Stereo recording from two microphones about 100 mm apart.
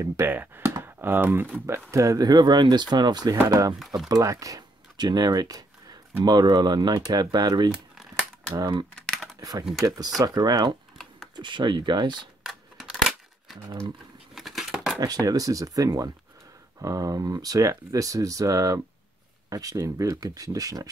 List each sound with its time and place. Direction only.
0.0 s speech: 25° right (ahead or behind)
1.9 s speech: 35° right (ahead or behind)
3.8 s speech: 5° right (ahead or behind)
4.1 s speech: 35° right (ahead or behind)
7.9 s a sound: centre (ahead or behind)
8.9 s typing: 5° left (ahead or behind)
9.4 s speech: 40° right (ahead or behind)
12.4 s a sound: centre (ahead or behind)
15.0 s speech: 40° right (ahead or behind)